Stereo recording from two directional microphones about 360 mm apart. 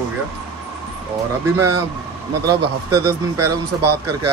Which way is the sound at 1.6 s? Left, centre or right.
Right.